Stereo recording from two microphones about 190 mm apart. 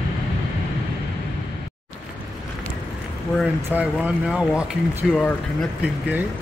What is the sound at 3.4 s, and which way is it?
Speech, 5° right (ahead or behind).